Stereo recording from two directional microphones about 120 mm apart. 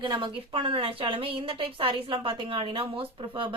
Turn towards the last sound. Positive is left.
turn(degrees=-45)  # may be behind; listen again after turning